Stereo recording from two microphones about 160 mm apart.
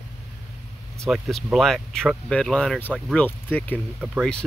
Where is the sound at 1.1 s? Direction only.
Centre (ahead or behind).